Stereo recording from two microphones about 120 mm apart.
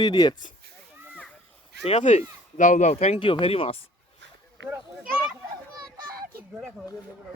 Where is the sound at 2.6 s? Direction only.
90° left; by 3.2 s 65° left (ahead or behind).